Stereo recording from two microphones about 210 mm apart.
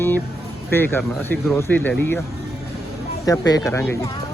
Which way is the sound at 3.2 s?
15° left (ahead or behind).